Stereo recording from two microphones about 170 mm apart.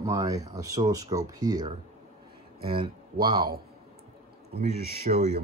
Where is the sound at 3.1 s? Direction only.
60° right (ahead or behind).